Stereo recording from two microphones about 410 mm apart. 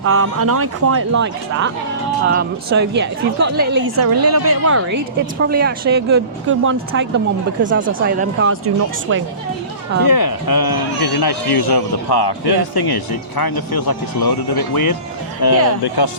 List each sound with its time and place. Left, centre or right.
0.0 s a woman's voice: right
4.0 s speech: right
5.5 s a woman's voice: right
10.1 s speech: left
15.4 s speech: left